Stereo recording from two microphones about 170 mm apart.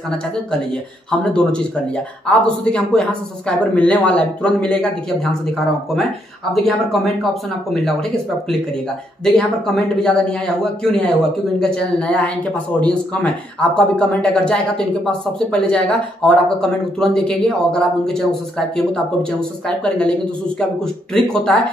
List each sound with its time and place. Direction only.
1.2 s speech: 5° left (ahead or behind)
6.5 s speech: centre (ahead or behind)
9.2 s speech: 5° left (ahead or behind)
19.8 s speech: 5° left (ahead or behind)